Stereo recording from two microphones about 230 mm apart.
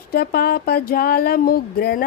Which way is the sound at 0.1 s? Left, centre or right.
Left.